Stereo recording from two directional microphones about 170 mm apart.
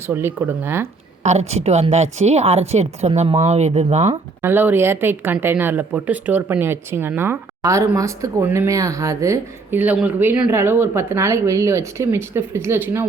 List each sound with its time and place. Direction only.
0.1 s speech: 10° right (ahead or behind)
1.2 s a woman's voice: 40° right (ahead or behind)
4.4 s speech: 10° right (ahead or behind)